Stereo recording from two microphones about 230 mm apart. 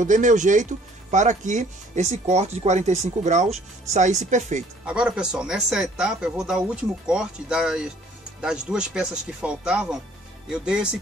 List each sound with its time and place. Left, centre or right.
0.0 s speech: right
4.8 s speech: centre